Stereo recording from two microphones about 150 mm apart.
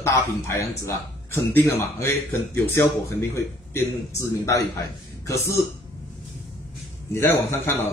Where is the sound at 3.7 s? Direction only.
20° left (ahead or behind).